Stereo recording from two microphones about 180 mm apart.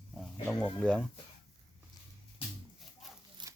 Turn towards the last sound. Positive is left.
turn(degrees=-25)  # may be behind; listen again after turning